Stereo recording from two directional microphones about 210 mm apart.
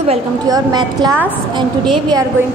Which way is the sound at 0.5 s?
20° right (ahead or behind).